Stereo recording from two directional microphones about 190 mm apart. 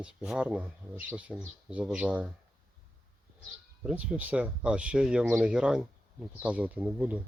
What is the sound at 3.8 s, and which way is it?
Speech, 5° right (ahead or behind).